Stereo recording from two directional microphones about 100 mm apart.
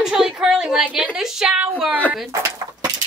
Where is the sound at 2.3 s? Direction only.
35° right (ahead or behind).